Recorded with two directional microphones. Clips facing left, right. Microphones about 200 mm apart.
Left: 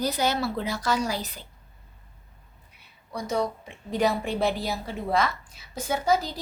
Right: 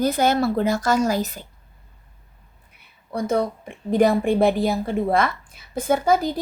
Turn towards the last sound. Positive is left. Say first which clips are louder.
# right 6 dB
turn(degrees=-50)  # may be behind; listen again after turning